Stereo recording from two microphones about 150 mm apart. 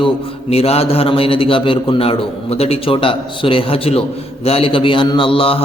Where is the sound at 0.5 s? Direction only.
40° left (ahead or behind).